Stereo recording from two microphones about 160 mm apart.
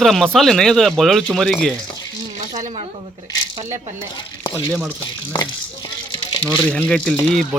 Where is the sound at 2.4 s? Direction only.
45° right (ahead or behind).